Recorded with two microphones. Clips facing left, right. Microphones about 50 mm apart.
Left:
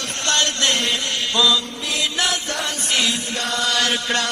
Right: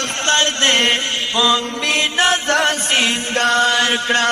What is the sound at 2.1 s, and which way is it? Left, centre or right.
Music, right.